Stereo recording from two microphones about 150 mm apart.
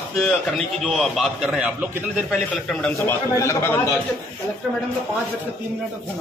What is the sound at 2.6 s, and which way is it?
A man's voice, 10° left (ahead or behind).